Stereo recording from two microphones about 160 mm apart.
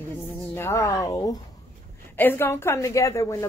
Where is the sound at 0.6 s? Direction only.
15° left (ahead or behind).